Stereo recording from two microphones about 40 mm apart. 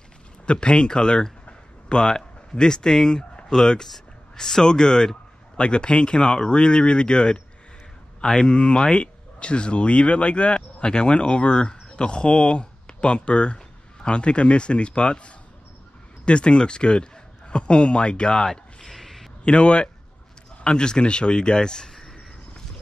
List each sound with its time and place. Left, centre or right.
0.5 s speech: left
1.4 s a sound: left
3.8 s a man's voice: centre
19.4 s speech: left